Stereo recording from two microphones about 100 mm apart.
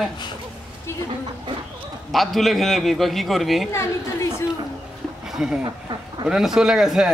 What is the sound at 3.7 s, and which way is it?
Speech, 25° left (ahead or behind).